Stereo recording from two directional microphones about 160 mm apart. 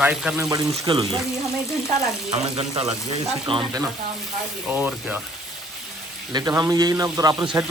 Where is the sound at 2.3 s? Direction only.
40° right (ahead or behind).